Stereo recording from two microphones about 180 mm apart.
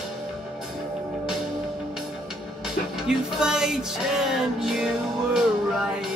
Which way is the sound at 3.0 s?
5° right (ahead or behind).